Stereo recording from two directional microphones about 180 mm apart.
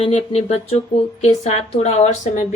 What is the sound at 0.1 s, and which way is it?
A woman's voice, 35° left (ahead or behind).